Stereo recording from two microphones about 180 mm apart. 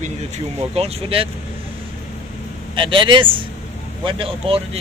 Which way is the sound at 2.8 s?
25° right (ahead or behind).